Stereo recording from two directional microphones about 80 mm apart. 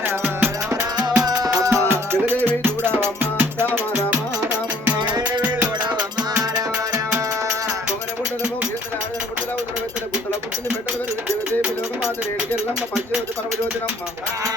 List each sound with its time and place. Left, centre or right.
0.0 s music: right
1.2 s music: right
2.2 s music: right
4.9 s music: right
5.2 s music: centre